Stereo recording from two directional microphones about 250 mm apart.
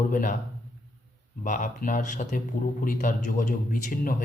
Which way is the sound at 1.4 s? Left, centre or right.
Left.